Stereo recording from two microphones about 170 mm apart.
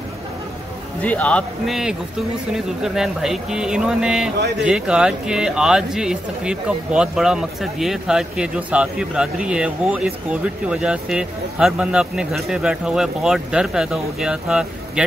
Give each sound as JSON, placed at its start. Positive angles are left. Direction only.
{"t": 1.0, "sound": "speech", "side_deg": 10}